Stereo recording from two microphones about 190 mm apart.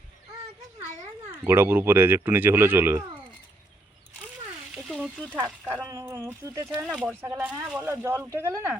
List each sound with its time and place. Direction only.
1.3 s speech: 10° right (ahead or behind)
4.7 s frying: 5° right (ahead or behind)
5.3 s speech: 10° right (ahead or behind)